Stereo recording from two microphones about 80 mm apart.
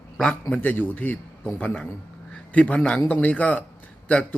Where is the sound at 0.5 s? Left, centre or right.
Left.